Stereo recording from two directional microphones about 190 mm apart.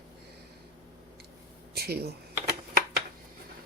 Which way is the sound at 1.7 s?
55° right (ahead or behind).